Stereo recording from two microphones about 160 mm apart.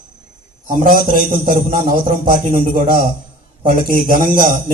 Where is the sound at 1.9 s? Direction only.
55° right (ahead or behind).